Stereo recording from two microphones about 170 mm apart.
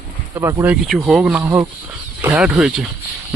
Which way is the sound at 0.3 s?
15° right (ahead or behind).